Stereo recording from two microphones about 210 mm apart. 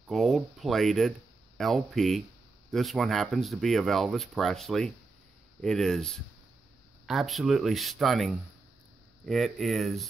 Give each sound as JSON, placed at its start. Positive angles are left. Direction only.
{"t": 0.1, "sound": "speech", "side_deg": 0}